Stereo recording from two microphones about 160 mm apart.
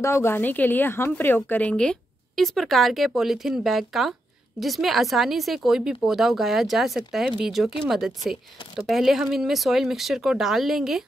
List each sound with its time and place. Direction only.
0.0 s a woman's voice: 15° left (ahead or behind); by 11.1 s centre (ahead or behind)